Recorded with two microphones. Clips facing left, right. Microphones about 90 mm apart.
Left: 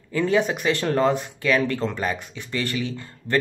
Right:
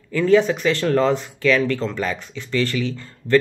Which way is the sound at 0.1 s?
20° left (ahead or behind).